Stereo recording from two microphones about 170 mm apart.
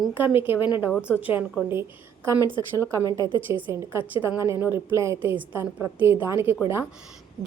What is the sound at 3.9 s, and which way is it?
A woman's voice, 10° right (ahead or behind).